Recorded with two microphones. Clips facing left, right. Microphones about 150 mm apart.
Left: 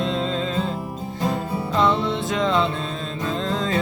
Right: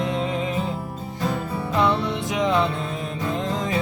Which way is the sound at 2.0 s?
15° right (ahead or behind).